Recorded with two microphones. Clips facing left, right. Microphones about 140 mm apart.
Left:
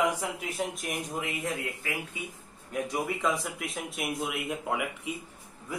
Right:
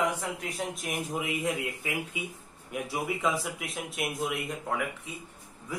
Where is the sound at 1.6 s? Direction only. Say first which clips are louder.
Right 2 dB; 15° right (ahead or behind).